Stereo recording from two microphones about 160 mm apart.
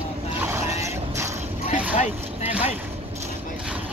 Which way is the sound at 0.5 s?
20° right (ahead or behind).